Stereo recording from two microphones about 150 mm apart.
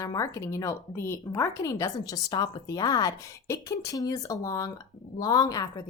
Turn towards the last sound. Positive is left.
turn(degrees=25)  # may be behind; listen again after turning